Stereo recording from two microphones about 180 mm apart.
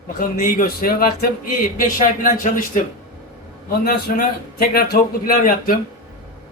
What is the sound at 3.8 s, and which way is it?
A man's voice, 55° left (ahead or behind).